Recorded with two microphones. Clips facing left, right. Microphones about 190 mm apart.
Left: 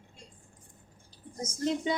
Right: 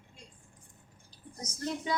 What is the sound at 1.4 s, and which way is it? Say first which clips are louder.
Speech: left 5 dB; 25° left (ahead or behind).